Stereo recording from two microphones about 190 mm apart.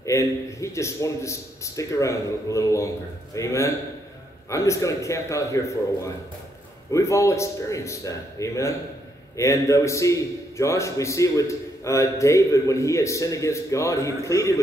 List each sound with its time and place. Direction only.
0.0 s a man's voice: 15° left (ahead or behind)
6.9 s a man's voice: 15° left (ahead or behind)